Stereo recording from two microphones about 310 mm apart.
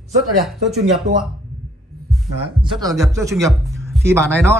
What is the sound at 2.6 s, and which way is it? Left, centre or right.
Speech, centre.